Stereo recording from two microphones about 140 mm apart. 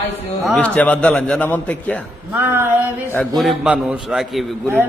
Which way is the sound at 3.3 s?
5° right (ahead or behind).